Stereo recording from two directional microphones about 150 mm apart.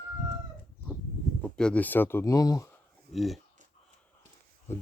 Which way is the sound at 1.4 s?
10° left (ahead or behind).